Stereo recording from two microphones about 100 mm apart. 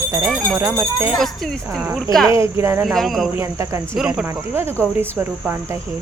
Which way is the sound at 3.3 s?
25° right (ahead or behind).